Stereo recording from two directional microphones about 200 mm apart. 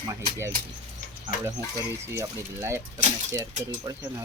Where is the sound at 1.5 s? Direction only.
15° right (ahead or behind).